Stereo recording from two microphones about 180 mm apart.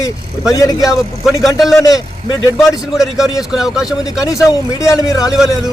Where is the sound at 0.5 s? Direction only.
20° left (ahead or behind).